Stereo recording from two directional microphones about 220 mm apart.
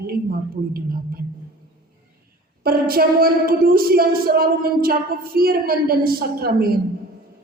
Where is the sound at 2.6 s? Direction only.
40° right (ahead or behind).